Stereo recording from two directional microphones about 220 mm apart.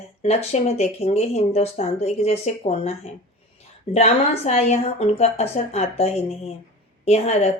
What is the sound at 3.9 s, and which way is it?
A woman's voice, 30° left (ahead or behind).